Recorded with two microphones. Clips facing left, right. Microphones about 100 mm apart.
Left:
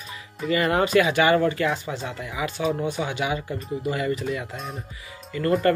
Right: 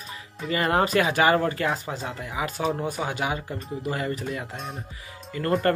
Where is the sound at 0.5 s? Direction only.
35° right (ahead or behind).